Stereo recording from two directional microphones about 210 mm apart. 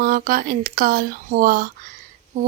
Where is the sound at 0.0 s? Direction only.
45° right (ahead or behind).